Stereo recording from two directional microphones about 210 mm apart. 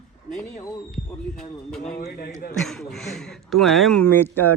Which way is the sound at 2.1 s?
45° left (ahead or behind).